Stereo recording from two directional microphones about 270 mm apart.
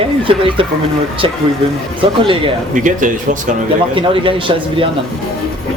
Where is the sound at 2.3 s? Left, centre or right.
Right.